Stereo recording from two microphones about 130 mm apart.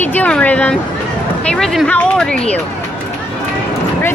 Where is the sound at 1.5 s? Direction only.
5° left (ahead or behind).